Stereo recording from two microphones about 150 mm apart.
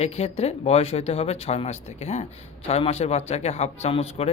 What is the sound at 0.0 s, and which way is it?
Speech, 45° left (ahead or behind).